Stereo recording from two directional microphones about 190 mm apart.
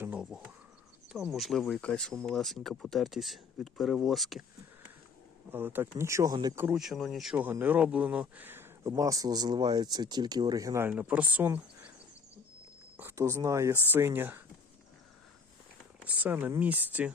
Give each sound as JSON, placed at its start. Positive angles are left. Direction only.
{"t": 0.0, "sound": "a sound", "side_deg": -5}
{"t": 1.1, "sound": "speech", "side_deg": 0}
{"t": 5.5, "sound": "speech", "side_deg": -10}
{"t": 6.7, "sound": "speech", "side_deg": 0}
{"t": 13.0, "sound": "speech", "side_deg": -15}
{"t": 16.0, "sound": "speech", "side_deg": -10}